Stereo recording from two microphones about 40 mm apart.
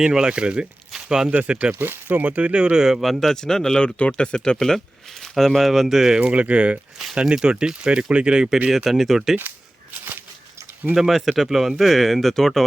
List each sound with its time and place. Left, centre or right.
0.0 s speech: centre
0.9 s a sound: centre
1.3 s speech: right
1.8 s speech: right
2.2 s speech: right
2.7 s speech: centre
3.2 s speech: centre
3.8 s speech: left
4.6 s speech: centre
6.1 s speech: right
8.9 s speech: centre
10.9 s speech: centre